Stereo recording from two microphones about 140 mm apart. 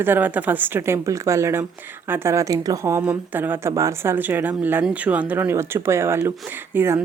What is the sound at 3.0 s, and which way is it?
Speech, 10° right (ahead or behind).